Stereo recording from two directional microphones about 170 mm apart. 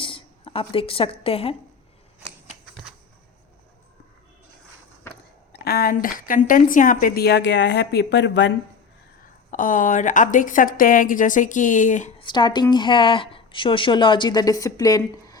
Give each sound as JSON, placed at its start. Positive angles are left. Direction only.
{"t": 0.0, "sound": "a woman's voice", "side_deg": 30}
{"t": 5.1, "sound": "a sound", "side_deg": 10}
{"t": 5.5, "sound": "a woman's voice", "side_deg": 65}
{"t": 9.5, "sound": "a woman's voice", "side_deg": 50}
{"t": 12.2, "sound": "a woman's voice", "side_deg": 25}